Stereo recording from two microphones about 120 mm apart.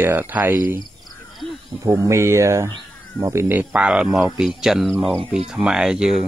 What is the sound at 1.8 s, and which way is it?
Speech, 25° right (ahead or behind).